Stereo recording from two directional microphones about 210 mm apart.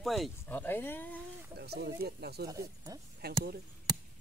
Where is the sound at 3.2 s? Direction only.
50° right (ahead or behind).